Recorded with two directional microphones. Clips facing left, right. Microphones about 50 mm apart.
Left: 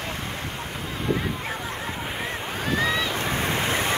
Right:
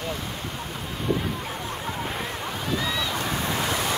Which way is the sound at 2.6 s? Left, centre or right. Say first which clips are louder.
Left 4 dB; left.